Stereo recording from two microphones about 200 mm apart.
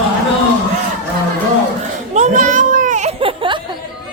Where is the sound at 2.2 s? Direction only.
40° right (ahead or behind).